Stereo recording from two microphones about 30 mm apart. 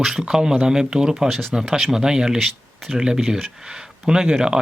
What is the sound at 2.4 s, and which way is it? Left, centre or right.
Speech, centre.